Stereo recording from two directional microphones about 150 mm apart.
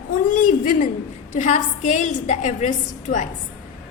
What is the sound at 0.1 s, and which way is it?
A woman's voice, 60° left (ahead or behind).